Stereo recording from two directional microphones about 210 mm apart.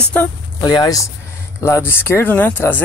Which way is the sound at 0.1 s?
15° left (ahead or behind).